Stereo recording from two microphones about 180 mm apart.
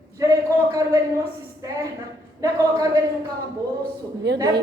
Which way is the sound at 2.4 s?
20° right (ahead or behind).